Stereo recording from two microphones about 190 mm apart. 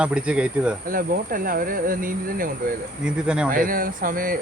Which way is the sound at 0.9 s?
45° right (ahead or behind).